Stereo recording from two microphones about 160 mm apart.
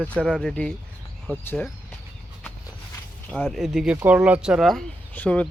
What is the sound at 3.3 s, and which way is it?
Speech, 5° left (ahead or behind).